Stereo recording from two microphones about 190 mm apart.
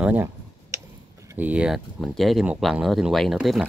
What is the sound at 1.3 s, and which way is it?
Speech, 10° right (ahead or behind).